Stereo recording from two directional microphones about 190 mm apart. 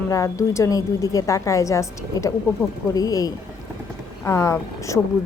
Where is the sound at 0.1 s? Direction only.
15° left (ahead or behind).